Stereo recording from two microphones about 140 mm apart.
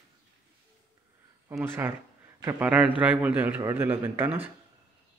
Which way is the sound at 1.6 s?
15° right (ahead or behind).